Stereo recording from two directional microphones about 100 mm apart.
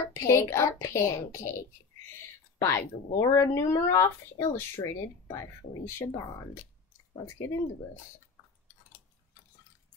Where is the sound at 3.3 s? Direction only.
30° left (ahead or behind).